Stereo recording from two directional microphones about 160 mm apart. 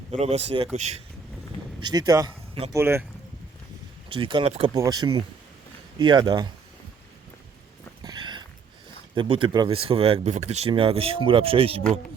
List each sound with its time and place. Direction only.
0.1 s speech: 40° right (ahead or behind)
1.8 s speech: 25° right (ahead or behind)
4.1 s speech: 30° right (ahead or behind)
4.7 s speech: 25° right (ahead or behind)
8.0 s a sound: 25° right (ahead or behind)
9.1 s speech: 35° right (ahead or behind)